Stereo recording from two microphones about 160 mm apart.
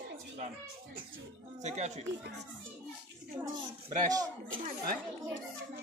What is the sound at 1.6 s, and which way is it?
Speech, 45° right (ahead or behind).